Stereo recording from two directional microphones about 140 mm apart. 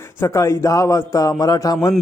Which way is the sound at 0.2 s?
20° left (ahead or behind).